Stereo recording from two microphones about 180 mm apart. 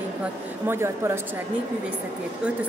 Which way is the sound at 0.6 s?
15° right (ahead or behind).